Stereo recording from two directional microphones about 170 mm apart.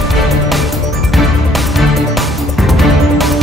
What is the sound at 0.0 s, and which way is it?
Music, centre (ahead or behind).